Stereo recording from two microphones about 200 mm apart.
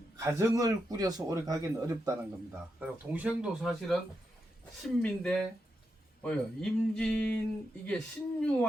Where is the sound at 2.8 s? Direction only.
5° right (ahead or behind).